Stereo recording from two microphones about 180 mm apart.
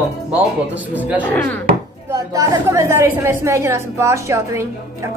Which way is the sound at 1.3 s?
10° left (ahead or behind).